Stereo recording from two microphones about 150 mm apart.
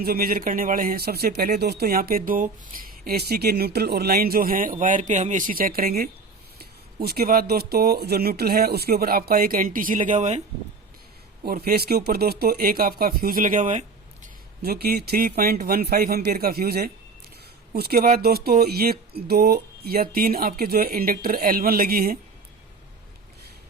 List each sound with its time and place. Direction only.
0.0 s speech: 80° right
6.6 s speech: 90° right; by 10.4 s 50° right (ahead or behind)
11.4 s speech: 90° right; by 13.8 s 55° right (ahead or behind)
14.6 s speech: 90° right